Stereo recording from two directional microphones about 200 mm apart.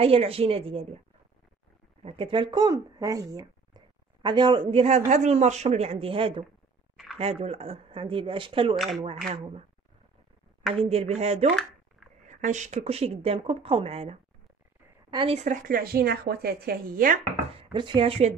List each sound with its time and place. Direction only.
0.0 s speech: 30° right (ahead or behind)
2.0 s speech: 25° right (ahead or behind)
8.7 s speech: centre (ahead or behind)
9.3 s speech: 30° right (ahead or behind)
10.9 s speech: 30° right (ahead or behind)
17.6 s speech: 25° right (ahead or behind)